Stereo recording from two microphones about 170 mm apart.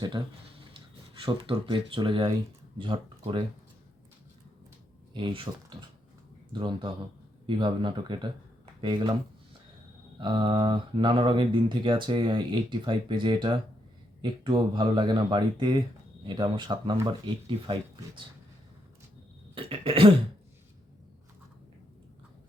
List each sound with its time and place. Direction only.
0.2 s speech: 20° right (ahead or behind)
5.1 s speech: 30° right (ahead or behind)
6.5 s speech: 30° right (ahead or behind)
10.2 s speech: 30° right (ahead or behind)
19.5 s cough: 30° right (ahead or behind)